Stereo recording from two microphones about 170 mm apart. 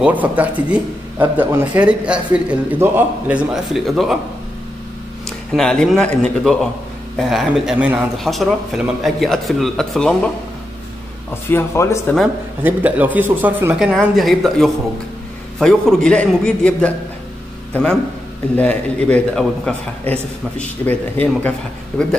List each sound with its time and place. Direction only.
0.0 s a man's voice: 10° right (ahead or behind)
5.2 s a man's voice: 5° left (ahead or behind)
11.5 s a man's voice: 15° left (ahead or behind)
12.6 s a man's voice: 10° right (ahead or behind); by 16.9 s 5° left (ahead or behind)
18.6 s a man's voice: 10° left (ahead or behind)